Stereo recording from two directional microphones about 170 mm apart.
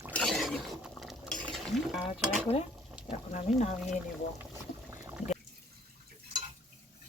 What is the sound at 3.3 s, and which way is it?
Speech, 45° left (ahead or behind).